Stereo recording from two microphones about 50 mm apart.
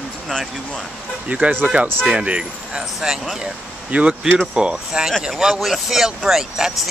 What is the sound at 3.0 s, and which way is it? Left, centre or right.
Speech, centre.